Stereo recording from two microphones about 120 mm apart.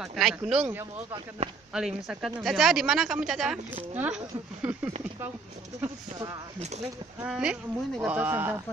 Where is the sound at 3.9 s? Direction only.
15° right (ahead or behind).